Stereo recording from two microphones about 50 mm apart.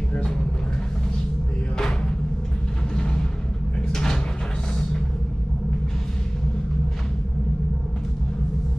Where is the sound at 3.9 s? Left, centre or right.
Centre.